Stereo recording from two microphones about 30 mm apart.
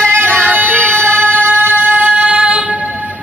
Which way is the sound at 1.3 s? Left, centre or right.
Right.